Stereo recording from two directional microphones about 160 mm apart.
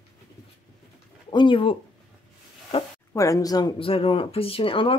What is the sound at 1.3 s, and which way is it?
Speech, 30° left (ahead or behind).